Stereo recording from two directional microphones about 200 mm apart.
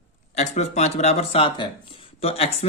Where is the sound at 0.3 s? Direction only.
35° left (ahead or behind).